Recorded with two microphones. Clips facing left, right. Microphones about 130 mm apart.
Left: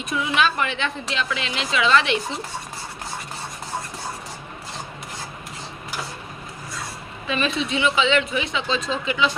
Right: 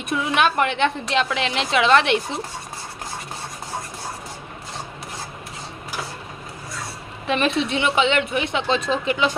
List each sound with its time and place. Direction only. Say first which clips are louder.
0.1 s a woman's voice: right 2 dB; 55° right (ahead or behind)
7.3 s a woman's voice: right 3 dB; 65° right (ahead or behind)